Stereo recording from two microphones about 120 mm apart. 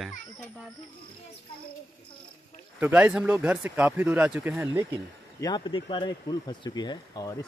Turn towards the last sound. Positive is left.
turn(degrees=30)  # may be behind; listen again after turning